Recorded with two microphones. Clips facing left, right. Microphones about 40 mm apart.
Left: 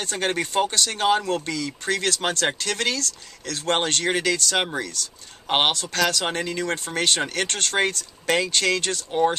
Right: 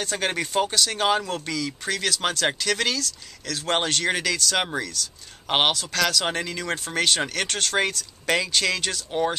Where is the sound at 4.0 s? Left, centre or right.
Centre.